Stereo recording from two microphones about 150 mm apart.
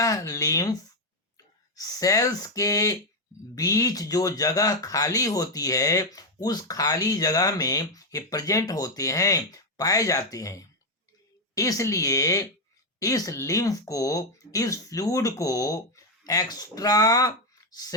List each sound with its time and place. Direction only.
0.0 s speech: 20° left (ahead or behind)